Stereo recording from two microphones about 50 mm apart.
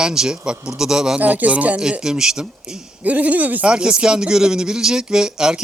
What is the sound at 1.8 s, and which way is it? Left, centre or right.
Speech, centre.